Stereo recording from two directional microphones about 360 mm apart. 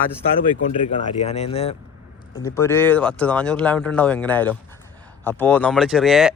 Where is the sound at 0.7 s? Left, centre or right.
Centre.